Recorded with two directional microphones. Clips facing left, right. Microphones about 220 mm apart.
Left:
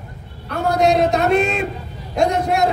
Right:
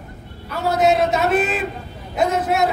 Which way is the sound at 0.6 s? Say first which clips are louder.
Left 1 dB; 5° right (ahead or behind).